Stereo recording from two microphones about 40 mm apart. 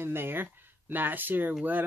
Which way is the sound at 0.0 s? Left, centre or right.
Right.